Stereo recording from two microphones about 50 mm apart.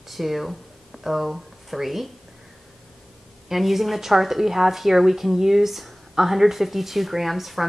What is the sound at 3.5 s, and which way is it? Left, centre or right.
Speech, centre.